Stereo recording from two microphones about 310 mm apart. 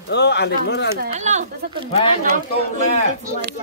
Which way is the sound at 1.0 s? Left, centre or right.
Right.